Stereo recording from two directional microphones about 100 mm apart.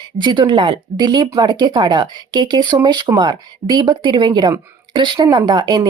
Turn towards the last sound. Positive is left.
turn(degrees=-45)  # may be behind; listen again after turning